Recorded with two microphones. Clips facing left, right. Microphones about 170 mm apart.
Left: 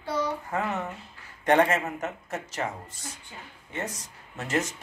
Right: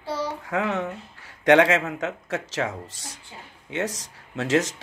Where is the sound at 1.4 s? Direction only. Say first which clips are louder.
Right 5 dB; 90° right.